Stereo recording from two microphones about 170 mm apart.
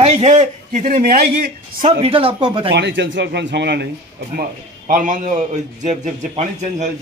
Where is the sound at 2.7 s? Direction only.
90° right.